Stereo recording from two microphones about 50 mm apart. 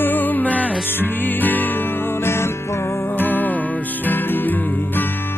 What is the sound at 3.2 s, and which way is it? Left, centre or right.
Music, left.